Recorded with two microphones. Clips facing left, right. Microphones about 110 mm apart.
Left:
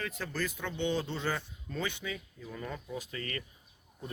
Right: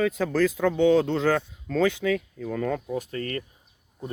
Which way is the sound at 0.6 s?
90° right.